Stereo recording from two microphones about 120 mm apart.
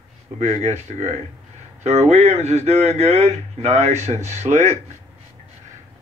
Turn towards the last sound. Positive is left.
turn(degrees=-70)  # may be behind; listen again after turning